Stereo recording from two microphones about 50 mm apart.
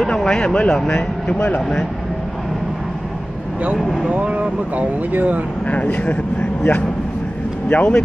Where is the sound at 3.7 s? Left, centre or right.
Centre.